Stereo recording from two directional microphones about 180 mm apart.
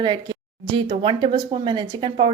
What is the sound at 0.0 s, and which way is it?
Speech, 25° right (ahead or behind).